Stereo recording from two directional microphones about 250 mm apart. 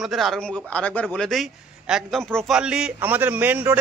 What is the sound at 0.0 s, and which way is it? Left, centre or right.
A man's voice, centre.